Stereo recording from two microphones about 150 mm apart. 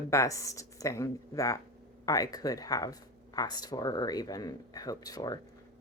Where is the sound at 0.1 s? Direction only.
20° left (ahead or behind).